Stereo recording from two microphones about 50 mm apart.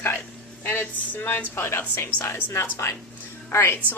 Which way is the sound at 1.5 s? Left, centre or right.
Left.